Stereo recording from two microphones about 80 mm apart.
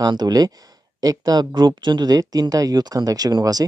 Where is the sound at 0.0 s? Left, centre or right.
Right.